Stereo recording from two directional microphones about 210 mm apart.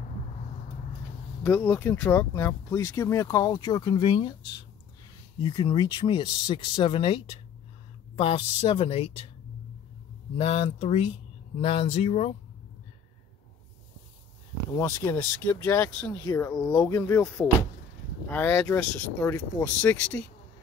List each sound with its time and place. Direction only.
1.4 s speech: 10° left (ahead or behind)
5.4 s speech: 20° left (ahead or behind)
10.3 s speech: 25° left (ahead or behind)
14.8 s speech: 15° left (ahead or behind)